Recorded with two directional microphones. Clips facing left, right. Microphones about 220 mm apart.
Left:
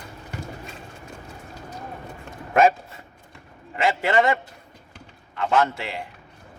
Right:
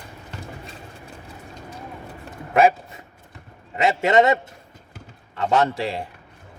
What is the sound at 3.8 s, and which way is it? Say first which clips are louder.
Speech: right 3 dB; 25° right (ahead or behind).